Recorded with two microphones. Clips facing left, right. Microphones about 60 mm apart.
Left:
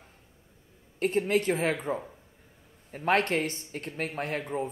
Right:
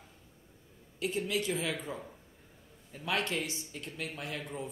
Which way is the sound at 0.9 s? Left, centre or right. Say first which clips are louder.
Left 7 dB; left.